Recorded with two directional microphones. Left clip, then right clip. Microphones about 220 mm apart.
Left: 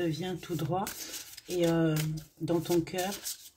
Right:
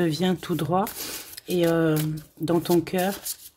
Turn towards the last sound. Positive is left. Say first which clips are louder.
# right 7 dB
turn(degrees=-45)  # may be behind; listen again after turning